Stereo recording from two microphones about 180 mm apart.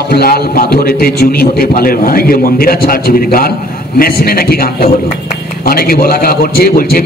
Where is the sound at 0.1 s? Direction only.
60° left (ahead or behind).